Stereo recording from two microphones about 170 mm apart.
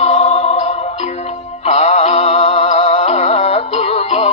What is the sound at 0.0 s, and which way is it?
Music, 35° left (ahead or behind).